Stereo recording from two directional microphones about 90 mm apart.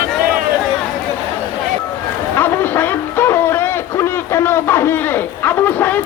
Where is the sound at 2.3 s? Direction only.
25° left (ahead or behind).